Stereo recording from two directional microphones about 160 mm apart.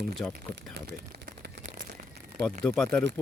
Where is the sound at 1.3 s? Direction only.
75° right (ahead or behind).